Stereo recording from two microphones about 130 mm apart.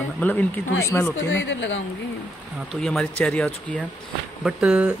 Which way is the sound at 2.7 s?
5° left (ahead or behind).